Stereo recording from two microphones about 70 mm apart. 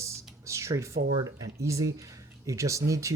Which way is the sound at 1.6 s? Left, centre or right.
Right.